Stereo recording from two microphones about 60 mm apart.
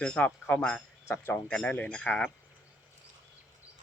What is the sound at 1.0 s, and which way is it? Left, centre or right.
Speech, left.